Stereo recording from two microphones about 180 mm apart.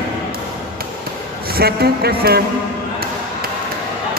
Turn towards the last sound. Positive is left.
turn(degrees=-60)  # may be behind; listen again after turning